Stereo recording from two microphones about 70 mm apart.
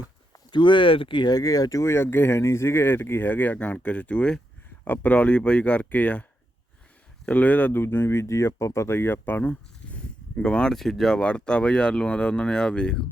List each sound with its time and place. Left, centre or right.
0.3 s a sound: left
1.2 s speech: left
1.8 s speech: left
7.3 s speech: left
7.8 s speech: left; by 13.1 s centre